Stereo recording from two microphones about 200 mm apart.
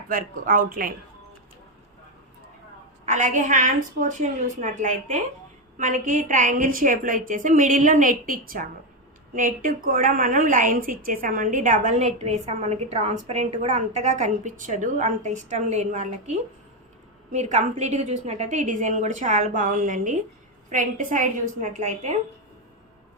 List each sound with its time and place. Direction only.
0.1 s speech: 45° right (ahead or behind)
3.1 s a woman's voice: 40° right (ahead or behind)